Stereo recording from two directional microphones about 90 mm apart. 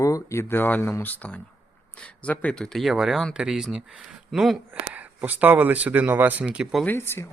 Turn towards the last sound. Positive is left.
turn(degrees=25)  # may be behind; listen again after turning